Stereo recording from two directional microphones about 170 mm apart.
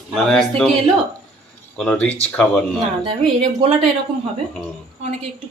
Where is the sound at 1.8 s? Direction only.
10° left (ahead or behind).